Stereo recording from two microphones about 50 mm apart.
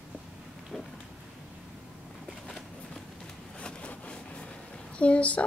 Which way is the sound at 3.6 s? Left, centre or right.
Left.